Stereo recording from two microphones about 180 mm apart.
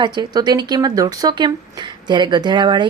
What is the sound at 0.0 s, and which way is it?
Speech, 25° right (ahead or behind).